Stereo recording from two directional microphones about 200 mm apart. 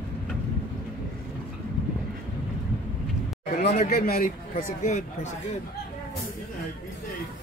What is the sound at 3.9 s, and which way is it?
Speech, 50° left (ahead or behind).